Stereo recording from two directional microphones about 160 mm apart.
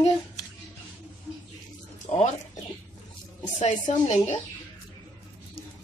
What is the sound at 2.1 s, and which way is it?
Speech, 40° left (ahead or behind).